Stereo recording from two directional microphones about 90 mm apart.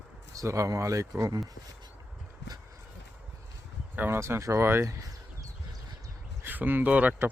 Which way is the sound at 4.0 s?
30° right (ahead or behind).